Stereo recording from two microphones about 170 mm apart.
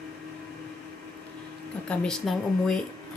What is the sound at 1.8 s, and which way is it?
Speech, 5° left (ahead or behind).